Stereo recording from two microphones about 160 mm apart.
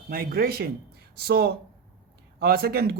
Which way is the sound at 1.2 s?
85° right.